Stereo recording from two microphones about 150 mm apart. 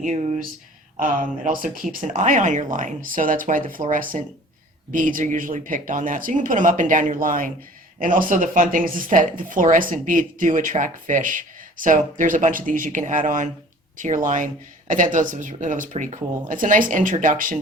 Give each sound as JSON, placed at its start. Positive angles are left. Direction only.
{"t": 0.0, "sound": "speech", "side_deg": -50}
{"t": 0.9, "sound": "speech", "side_deg": -65}